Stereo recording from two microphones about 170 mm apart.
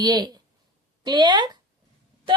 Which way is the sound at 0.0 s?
25° right (ahead or behind).